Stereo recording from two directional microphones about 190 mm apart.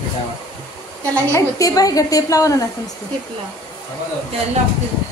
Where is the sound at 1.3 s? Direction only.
15° left (ahead or behind).